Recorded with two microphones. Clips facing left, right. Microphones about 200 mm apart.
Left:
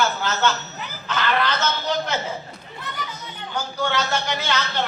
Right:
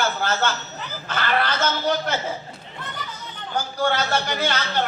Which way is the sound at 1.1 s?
50° right (ahead or behind).